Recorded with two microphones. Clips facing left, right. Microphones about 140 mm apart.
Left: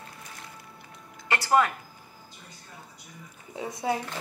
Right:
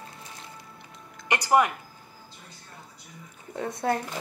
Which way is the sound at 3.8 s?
5° left (ahead or behind).